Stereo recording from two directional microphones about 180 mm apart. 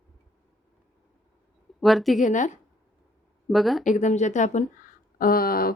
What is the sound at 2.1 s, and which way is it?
Speech, 45° left (ahead or behind).